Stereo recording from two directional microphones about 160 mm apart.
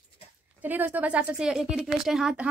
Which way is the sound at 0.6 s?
10° right (ahead or behind).